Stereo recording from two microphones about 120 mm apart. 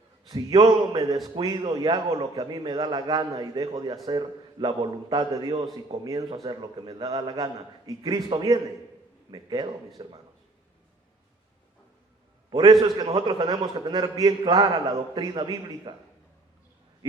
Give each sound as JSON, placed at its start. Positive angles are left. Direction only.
{"t": 0.3, "sound": "a man's voice", "side_deg": -35}
{"t": 12.5, "sound": "a man's voice", "side_deg": -35}